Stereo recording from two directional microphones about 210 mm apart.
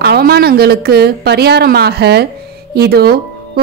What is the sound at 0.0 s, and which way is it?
A woman's voice, 50° right (ahead or behind).